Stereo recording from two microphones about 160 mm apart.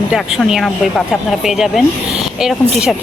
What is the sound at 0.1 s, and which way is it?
Speech, centre (ahead or behind).